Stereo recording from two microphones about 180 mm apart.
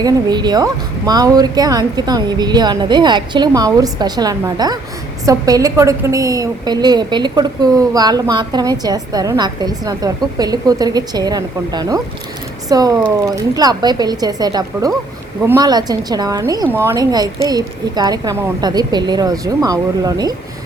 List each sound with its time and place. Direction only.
0.0 s a woman's voice: 25° right (ahead or behind)